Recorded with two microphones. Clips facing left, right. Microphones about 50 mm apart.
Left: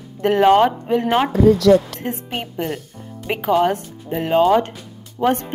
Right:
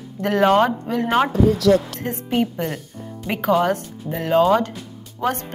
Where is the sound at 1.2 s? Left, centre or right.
Centre.